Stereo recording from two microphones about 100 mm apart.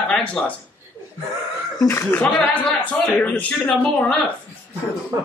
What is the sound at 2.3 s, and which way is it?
A man's voice, 15° left (ahead or behind).